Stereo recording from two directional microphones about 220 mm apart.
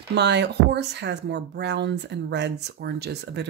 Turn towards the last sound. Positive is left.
turn(degrees=-50)  # may be behind; listen again after turning